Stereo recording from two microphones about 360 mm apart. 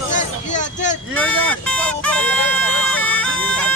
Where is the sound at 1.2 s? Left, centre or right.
Centre.